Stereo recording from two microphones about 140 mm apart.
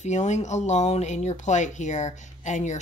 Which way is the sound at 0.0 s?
55° left (ahead or behind).